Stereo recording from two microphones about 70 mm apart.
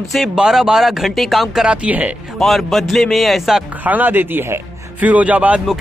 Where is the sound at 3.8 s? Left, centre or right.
Right.